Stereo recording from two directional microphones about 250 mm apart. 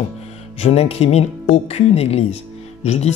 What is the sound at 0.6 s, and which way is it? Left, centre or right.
Speech, left.